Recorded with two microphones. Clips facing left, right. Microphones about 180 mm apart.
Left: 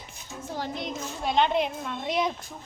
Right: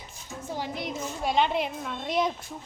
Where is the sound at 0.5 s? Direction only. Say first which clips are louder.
Even; 10° right (ahead or behind).